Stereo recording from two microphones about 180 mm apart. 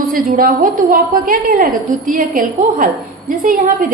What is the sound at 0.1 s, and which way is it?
A woman's voice, 50° right (ahead or behind).